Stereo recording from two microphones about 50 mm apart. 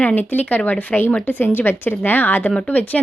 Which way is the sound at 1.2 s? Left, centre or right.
Left.